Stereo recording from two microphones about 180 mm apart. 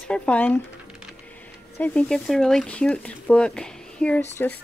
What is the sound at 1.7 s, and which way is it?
Speech, 10° left (ahead or behind).